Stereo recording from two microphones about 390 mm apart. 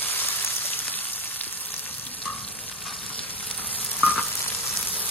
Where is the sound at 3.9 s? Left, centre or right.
Centre.